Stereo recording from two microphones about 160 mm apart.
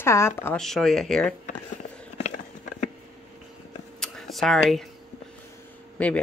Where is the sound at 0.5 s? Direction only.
Centre (ahead or behind).